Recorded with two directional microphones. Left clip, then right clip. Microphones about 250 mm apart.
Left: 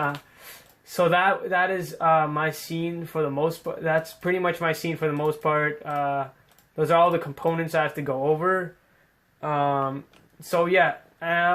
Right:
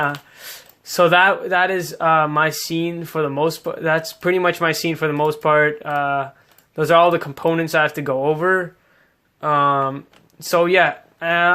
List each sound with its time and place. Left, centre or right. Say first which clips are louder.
0.9 s speech: right 7 dB; right